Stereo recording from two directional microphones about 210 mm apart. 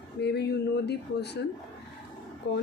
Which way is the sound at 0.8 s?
50° left (ahead or behind).